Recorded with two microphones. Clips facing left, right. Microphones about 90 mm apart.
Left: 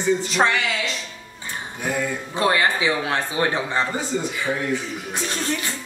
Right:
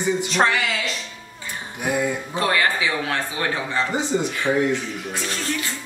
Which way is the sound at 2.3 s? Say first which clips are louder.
Left 3 dB; 20° left (ahead or behind).